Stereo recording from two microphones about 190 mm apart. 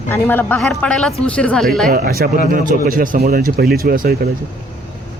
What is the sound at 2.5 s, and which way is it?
Speech, 50° right (ahead or behind).